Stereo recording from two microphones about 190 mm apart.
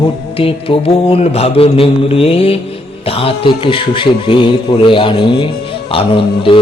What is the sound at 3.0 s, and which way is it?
A man's voice, 30° left (ahead or behind).